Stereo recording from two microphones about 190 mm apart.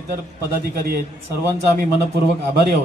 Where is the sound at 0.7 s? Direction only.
50° right (ahead or behind).